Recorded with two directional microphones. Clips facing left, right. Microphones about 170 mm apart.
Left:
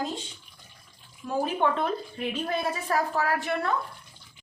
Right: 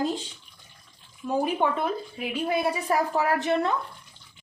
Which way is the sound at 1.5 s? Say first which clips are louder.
Even; 10° right (ahead or behind).